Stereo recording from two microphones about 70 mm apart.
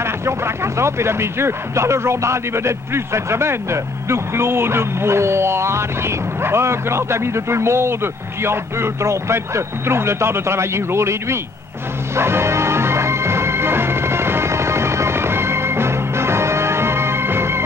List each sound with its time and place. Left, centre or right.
0.7 s a man's voice: right
12.2 s music: right